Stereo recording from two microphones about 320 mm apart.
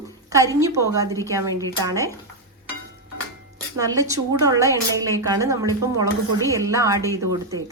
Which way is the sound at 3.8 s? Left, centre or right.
Centre.